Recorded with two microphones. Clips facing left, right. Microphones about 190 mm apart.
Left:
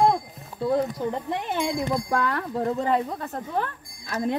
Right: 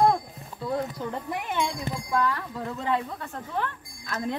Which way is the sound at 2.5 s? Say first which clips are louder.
Left 5 dB; 40° left (ahead or behind).